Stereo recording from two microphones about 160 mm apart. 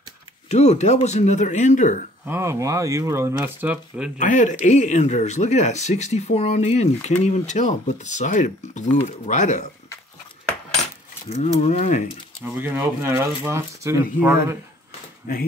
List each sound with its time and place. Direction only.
0.5 s speech: 45° left (ahead or behind)
2.2 s speech: 15° right (ahead or behind)
4.2 s speech: 50° left (ahead or behind)
11.4 s speech: 45° left (ahead or behind)
12.5 s speech: 15° right (ahead or behind)